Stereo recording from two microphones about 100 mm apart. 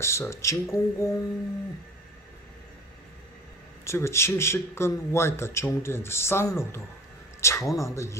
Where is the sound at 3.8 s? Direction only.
25° left (ahead or behind).